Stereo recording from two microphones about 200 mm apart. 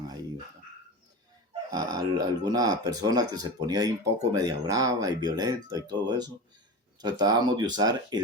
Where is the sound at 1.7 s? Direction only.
20° right (ahead or behind).